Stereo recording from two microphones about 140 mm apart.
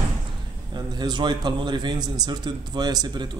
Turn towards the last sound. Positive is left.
turn(degrees=-30)  # may be behind; listen again after turning